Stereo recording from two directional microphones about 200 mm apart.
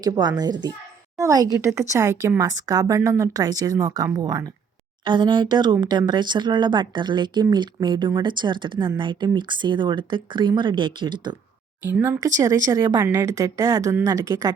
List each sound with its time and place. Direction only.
0.0 s speech: 20° right (ahead or behind)
11.9 s speech: 10° right (ahead or behind)